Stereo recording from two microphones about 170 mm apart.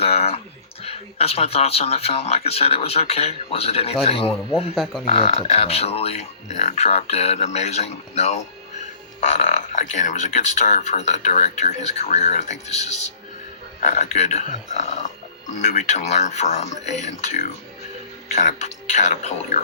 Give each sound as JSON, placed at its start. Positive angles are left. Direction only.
{"t": 0.0, "sound": "speech", "side_deg": 35}
{"t": 4.7, "sound": "speech", "side_deg": 0}
{"t": 5.0, "sound": "speech", "side_deg": 40}
{"t": 13.9, "sound": "speech", "side_deg": 40}